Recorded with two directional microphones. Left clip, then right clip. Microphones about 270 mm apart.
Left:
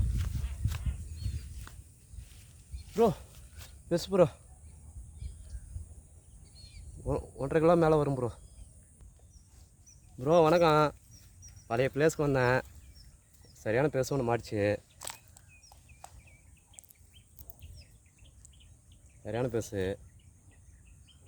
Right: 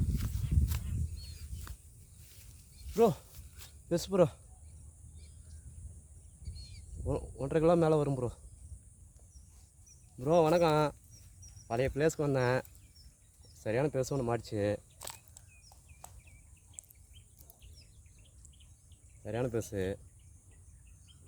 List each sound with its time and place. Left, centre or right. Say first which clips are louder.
0.1 s a sound: right 3 dB; right
3.6 s a sound: left 2 dB; centre
6.6 s bird: even; centre
7.0 s a man's voice: left 3 dB; centre
10.2 s speech: left 3 dB; centre
13.6 s biting: left 3 dB; centre
19.2 s speech: left 2 dB; centre